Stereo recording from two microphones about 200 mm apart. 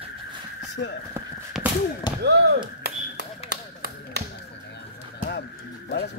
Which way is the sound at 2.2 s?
55° right (ahead or behind).